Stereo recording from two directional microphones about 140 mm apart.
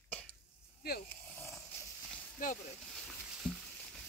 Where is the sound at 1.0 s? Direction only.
15° left (ahead or behind).